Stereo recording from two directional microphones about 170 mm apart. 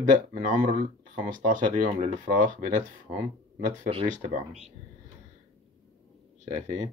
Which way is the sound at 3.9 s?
35° right (ahead or behind).